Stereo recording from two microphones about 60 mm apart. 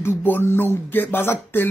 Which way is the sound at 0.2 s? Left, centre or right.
Left.